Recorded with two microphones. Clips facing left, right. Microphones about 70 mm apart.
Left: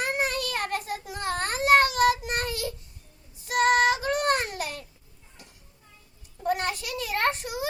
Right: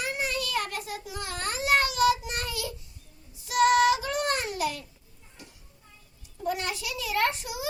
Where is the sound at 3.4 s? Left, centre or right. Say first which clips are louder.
Right 1 dB; left.